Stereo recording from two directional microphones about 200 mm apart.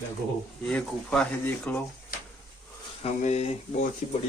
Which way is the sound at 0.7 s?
5° left (ahead or behind).